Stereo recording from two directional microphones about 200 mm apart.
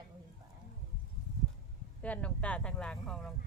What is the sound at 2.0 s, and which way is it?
Speech, 5° left (ahead or behind).